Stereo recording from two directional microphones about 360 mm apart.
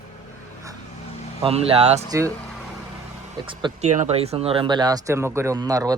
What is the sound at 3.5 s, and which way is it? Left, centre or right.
Speech, centre.